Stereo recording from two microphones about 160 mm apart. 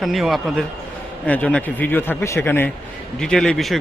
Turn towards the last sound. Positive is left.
turn(degrees=0)  # may be behind; listen again after turning